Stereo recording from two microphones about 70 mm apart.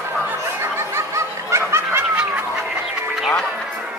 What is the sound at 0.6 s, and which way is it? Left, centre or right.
Snicker, right.